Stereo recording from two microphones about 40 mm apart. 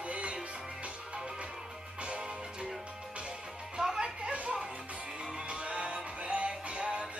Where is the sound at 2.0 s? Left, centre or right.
Right.